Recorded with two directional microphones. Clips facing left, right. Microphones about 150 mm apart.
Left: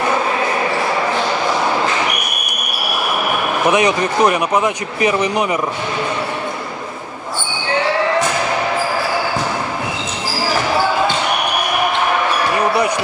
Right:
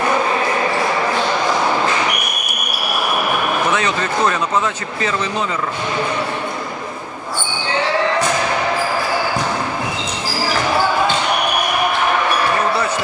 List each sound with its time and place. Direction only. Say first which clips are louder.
3.7 s speech: left 4 dB; 15° left (ahead or behind)